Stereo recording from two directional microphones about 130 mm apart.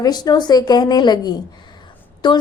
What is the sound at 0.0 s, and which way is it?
A woman's voice, 30° left (ahead or behind).